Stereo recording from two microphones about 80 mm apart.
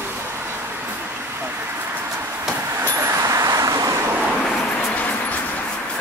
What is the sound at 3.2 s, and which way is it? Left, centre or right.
Vehicle, right.